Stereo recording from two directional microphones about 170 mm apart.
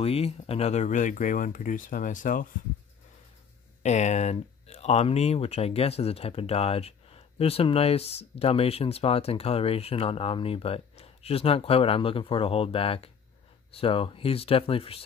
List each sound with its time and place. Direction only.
0.0 s speech: 35° left (ahead or behind); by 2.4 s 50° left (ahead or behind)
3.8 s speech: 40° left (ahead or behind)